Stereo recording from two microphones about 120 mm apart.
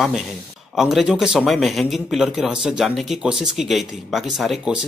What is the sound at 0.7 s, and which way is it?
A man's voice, 5° right (ahead or behind).